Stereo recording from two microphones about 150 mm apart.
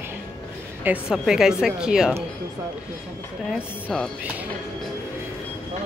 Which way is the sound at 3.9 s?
5° left (ahead or behind).